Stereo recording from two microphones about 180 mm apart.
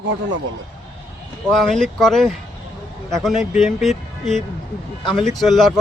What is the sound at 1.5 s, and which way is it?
Speech, 5° left (ahead or behind).